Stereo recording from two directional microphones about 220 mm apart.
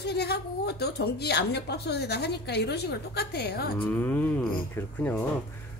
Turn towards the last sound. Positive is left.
turn(degrees=10)  # may be behind; listen again after turning